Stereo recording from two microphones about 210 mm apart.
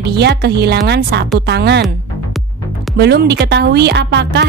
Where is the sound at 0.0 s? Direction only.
50° right (ahead or behind).